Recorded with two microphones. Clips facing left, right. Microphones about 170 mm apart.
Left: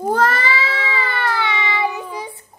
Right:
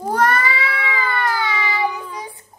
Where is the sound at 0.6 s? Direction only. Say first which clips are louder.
Even; 25° left (ahead or behind).